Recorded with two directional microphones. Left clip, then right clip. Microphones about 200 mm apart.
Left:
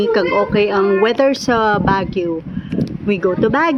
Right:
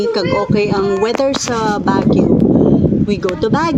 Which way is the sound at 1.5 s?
15° left (ahead or behind).